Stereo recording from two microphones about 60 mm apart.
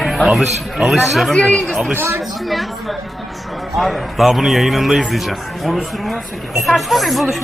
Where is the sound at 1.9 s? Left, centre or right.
Right.